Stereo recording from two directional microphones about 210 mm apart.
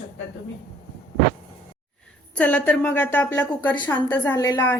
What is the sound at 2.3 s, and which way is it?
A woman's voice, 5° left (ahead or behind).